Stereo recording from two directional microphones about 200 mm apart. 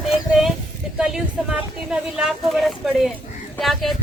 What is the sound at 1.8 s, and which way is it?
Speech, 5° right (ahead or behind).